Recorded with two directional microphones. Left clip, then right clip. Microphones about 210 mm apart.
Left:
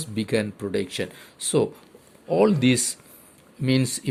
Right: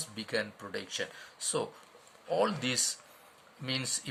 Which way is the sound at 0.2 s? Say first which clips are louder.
Left 10 dB; 35° left (ahead or behind).